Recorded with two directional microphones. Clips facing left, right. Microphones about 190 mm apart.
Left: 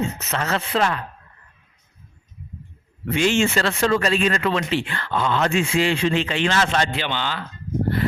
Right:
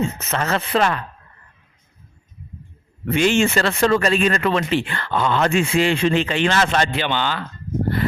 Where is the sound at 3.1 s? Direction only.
55° right (ahead or behind).